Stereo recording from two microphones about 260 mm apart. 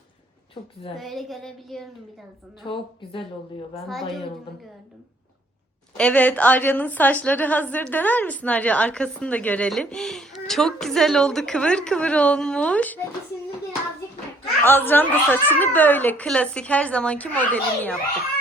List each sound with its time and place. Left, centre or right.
0.9 s a woman's voice: centre
2.6 s a woman's voice: centre
6.0 s a woman's voice: centre
14.6 s a woman's voice: centre